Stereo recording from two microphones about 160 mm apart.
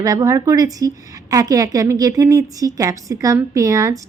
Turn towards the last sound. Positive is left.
turn(degrees=-20)  # may be behind; listen again after turning